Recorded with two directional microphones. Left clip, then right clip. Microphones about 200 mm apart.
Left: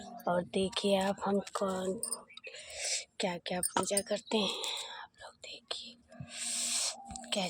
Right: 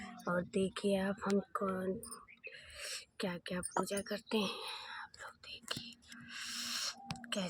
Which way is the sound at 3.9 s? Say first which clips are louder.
Left 5 dB; 20° right (ahead or behind).